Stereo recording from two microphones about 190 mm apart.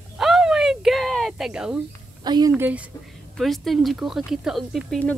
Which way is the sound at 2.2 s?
20° right (ahead or behind).